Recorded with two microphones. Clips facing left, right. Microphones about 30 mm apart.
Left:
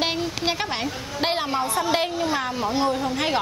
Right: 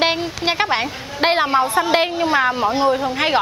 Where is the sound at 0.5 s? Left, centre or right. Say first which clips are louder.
Right 10 dB; right.